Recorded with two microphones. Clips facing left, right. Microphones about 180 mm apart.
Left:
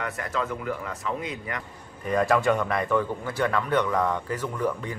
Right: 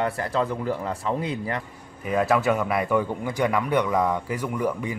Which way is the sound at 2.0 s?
5° right (ahead or behind).